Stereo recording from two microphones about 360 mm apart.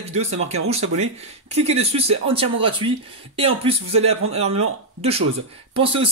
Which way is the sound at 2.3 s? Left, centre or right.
Centre.